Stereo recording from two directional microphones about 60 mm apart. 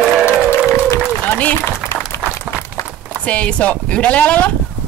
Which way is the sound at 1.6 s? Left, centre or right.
Left.